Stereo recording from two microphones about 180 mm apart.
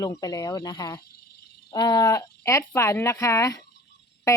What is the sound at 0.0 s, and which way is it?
Speech, 20° left (ahead or behind).